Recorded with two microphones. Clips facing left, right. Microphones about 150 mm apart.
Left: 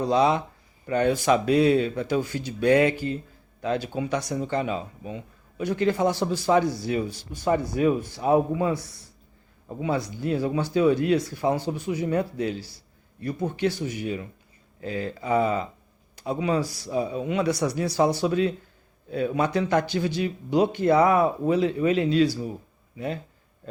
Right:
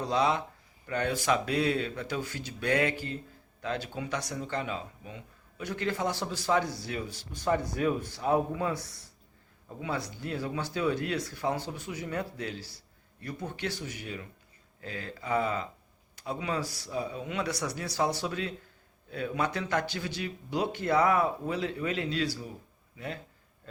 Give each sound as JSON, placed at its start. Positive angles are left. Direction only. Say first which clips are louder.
{"t": 0.0, "sound": "speech", "louder": "left 6 dB", "side_deg": 15}